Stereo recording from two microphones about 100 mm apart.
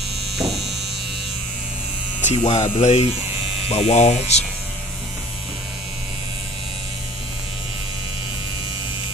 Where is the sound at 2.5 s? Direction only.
90° left.